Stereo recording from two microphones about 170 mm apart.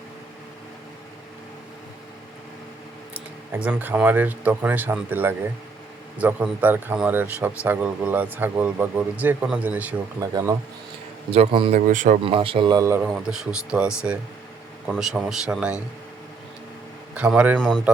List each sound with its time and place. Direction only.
3.5 s speech: 10° right (ahead or behind)
11.3 s a man's voice: 35° right (ahead or behind)
11.9 s speech: 50° right (ahead or behind)
12.2 s a man's voice: 30° right (ahead or behind)
13.1 s speech: centre (ahead or behind)
17.2 s speech: 5° right (ahead or behind)
17.6 s speech: 5° left (ahead or behind)